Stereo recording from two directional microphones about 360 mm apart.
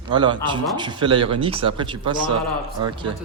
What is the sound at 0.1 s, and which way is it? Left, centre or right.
A man's voice, centre.